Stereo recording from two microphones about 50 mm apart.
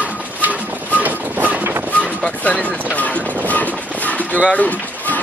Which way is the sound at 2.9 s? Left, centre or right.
Left.